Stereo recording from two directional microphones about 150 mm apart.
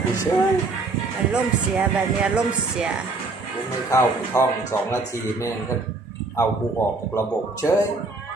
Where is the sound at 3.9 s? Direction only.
20° left (ahead or behind).